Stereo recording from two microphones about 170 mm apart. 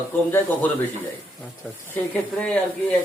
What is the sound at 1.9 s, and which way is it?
Speech, 5° left (ahead or behind).